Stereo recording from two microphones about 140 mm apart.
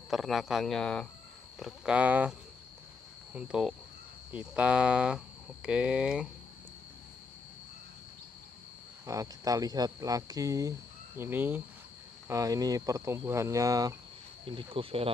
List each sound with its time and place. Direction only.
0.1 s speech: centre (ahead or behind)
3.3 s speech: 5° right (ahead or behind)
9.0 s speech: 25° right (ahead or behind)
12.3 s speech: 25° right (ahead or behind)
14.4 s speech: 35° right (ahead or behind)